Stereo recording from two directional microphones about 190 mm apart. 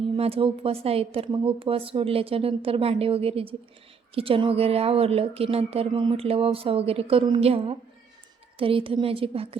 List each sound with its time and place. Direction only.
0.2 s a woman's voice: 30° right (ahead or behind)